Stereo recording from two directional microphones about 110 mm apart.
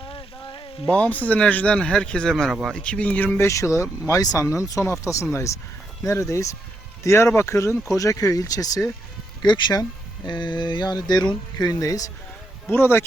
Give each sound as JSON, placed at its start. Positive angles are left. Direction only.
{"t": 0.0, "sound": "frying", "side_deg": 50}
{"t": 0.9, "sound": "speech", "side_deg": 10}
{"t": 2.8, "sound": "speech", "side_deg": 10}
{"t": 12.7, "sound": "speech", "side_deg": 20}